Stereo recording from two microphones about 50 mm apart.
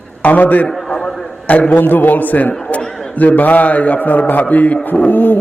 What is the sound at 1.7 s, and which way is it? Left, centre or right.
Speech, left.